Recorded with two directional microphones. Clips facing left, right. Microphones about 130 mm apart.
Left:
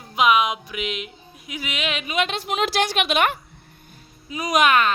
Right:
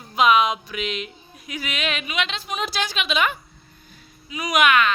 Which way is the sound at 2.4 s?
75° left (ahead or behind).